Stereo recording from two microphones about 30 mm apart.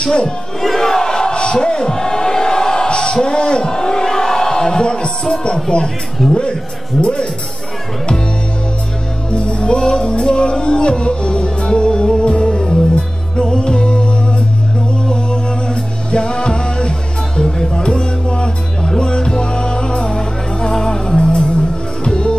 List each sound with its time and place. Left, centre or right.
0.0 s speech: left
0.6 s crowd: centre
1.4 s a sound: left
2.9 s a sound: left
3.2 s speech: left
3.6 s a sound: left
5.3 s speech: left
6.2 s a man's voice: centre
7.0 s speech: left
9.3 s music: left
15.7 s music: left
17.8 s music: left
22.0 s music: left